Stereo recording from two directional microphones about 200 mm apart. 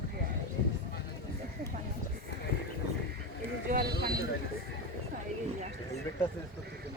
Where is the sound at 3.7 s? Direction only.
50° right (ahead or behind).